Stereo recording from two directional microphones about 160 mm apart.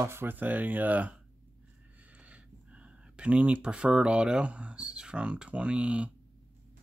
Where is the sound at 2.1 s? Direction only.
10° right (ahead or behind).